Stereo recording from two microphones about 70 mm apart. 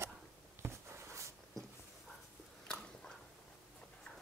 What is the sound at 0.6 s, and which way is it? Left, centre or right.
Writing, right.